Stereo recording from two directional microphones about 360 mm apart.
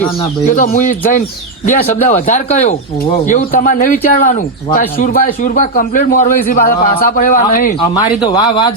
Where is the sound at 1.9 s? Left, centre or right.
Centre.